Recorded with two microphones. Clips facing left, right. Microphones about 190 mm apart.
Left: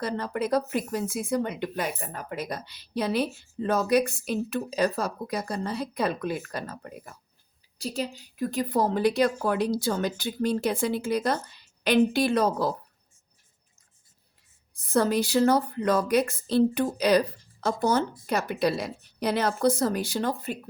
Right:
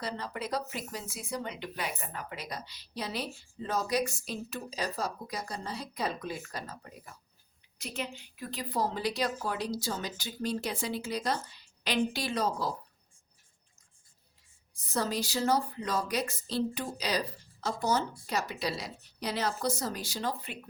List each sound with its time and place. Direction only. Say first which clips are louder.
0.0 s speech: left 8 dB; 50° left (ahead or behind)
7.8 s speech: left 7 dB; 35° left (ahead or behind); by 12.7 s 55° left (ahead or behind)
14.7 s speech: left 9 dB; 55° left (ahead or behind)